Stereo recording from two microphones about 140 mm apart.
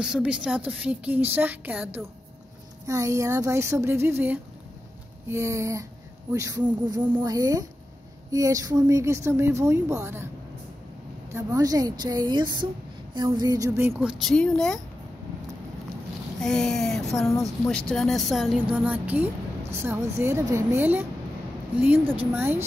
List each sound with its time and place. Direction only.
0.0 s a woman's voice: 5° right (ahead or behind)
2.9 s a woman's voice: 20° right (ahead or behind)
7.2 s speech: 25° right (ahead or behind)
11.3 s speech: 25° right (ahead or behind)
13.7 s a woman's voice: 15° right (ahead or behind)
14.3 s speech: 5° left (ahead or behind)
16.3 s a woman's voice: 5° left (ahead or behind); by 22.7 s 15° right (ahead or behind)